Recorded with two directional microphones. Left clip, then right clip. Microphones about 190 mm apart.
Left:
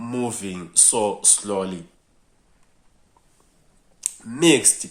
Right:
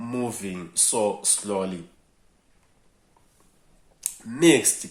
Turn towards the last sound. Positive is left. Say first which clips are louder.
# left 1 dB
turn(degrees=15)  # may be behind; listen again after turning